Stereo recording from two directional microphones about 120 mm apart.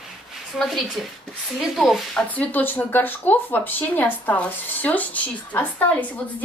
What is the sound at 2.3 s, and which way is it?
A woman's voice, 15° left (ahead or behind).